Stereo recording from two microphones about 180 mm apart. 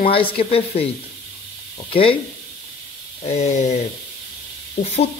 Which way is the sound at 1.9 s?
30° left (ahead or behind).